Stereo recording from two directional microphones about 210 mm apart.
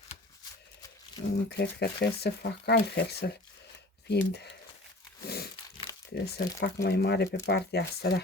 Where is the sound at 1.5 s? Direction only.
50° left (ahead or behind).